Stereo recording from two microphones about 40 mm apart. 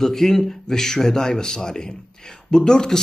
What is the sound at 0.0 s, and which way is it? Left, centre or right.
Speech, centre.